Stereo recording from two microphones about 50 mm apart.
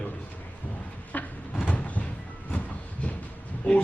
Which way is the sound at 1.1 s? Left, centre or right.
Left.